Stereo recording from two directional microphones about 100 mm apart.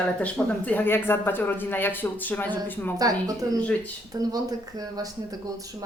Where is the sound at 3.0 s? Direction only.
40° right (ahead or behind).